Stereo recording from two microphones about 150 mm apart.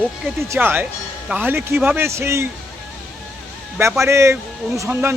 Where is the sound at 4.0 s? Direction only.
20° right (ahead or behind).